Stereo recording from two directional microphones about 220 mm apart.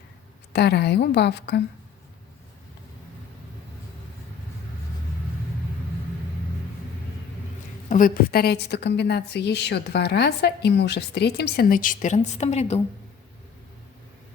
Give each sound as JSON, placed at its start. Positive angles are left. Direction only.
{"t": 0.5, "sound": "a woman's voice", "side_deg": 50}
{"t": 7.9, "sound": "a woman's voice", "side_deg": 40}